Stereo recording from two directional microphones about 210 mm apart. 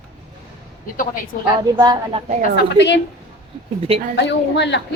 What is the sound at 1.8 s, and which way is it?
Speech, 20° right (ahead or behind).